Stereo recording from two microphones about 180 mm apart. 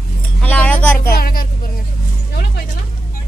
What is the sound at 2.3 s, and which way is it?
Vehicle, 55° left (ahead or behind).